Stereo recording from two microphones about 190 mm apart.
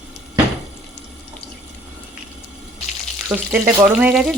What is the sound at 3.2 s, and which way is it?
A woman's voice, 10° right (ahead or behind).